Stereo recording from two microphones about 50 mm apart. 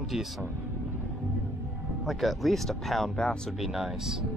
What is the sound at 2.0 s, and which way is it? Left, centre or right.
Speech, centre.